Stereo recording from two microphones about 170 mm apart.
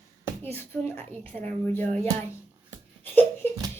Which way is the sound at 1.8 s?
40° right (ahead or behind).